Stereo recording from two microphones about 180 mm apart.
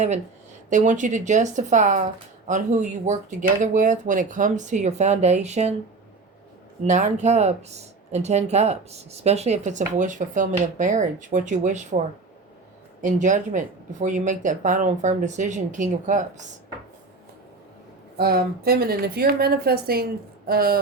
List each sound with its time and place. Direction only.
0.7 s speech: 45° right (ahead or behind)
6.8 s speech: 40° right (ahead or behind)
13.0 s speech: 45° right (ahead or behind)
18.2 s a woman's voice: 60° right (ahead or behind)